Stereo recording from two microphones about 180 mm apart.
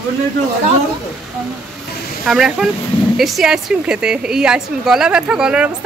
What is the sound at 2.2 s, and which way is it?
A woman's voice, centre (ahead or behind).